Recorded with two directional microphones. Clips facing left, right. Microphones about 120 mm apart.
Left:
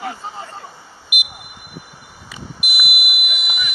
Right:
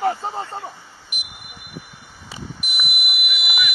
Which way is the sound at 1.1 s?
10° left (ahead or behind).